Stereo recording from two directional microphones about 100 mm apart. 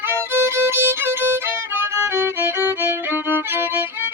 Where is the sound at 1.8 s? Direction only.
25° right (ahead or behind).